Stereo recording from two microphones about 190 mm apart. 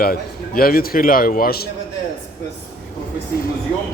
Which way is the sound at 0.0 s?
50° left (ahead or behind).